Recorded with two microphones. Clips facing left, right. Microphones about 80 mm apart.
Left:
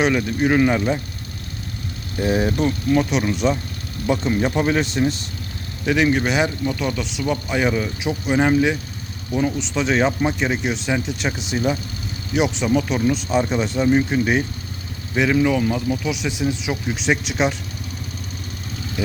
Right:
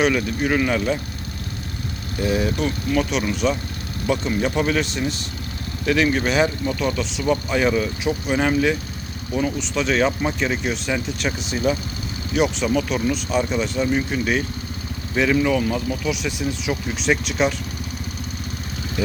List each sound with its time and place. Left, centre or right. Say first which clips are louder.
0.0 s speech: left 1 dB; left
2.2 s speech: left 2 dB; left
5.8 s speech: left 1 dB; centre
7.5 s speech: right 1 dB; centre
15.1 s speech: left 1 dB; centre
19.0 s speech: right 1 dB; centre